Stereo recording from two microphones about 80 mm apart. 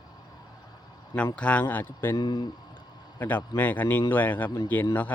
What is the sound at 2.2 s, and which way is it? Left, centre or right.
Speech, left.